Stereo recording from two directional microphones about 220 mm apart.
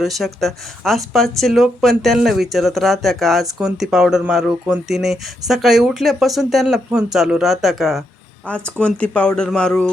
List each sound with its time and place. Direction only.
0.0 s speech: centre (ahead or behind)